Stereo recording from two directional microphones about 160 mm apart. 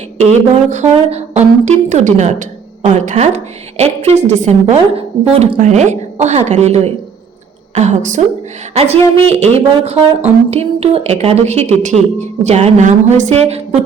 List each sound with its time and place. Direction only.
0.2 s a woman's voice: 45° right (ahead or behind)